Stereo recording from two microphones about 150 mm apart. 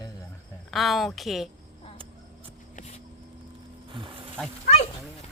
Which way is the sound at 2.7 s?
50° left (ahead or behind).